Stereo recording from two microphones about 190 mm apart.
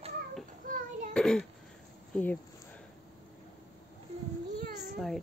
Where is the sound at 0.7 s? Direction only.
45° right (ahead or behind).